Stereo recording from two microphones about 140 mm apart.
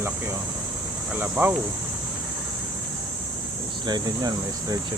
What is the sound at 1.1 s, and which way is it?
Speech, 15° right (ahead or behind).